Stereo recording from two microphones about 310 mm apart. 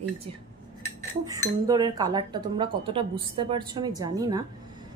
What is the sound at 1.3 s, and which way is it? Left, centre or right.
Speech, centre.